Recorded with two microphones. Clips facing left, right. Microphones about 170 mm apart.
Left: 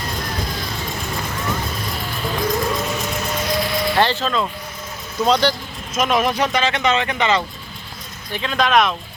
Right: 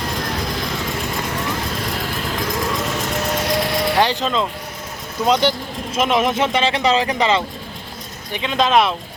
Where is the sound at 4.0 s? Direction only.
15° right (ahead or behind); by 7.4 s 30° right (ahead or behind).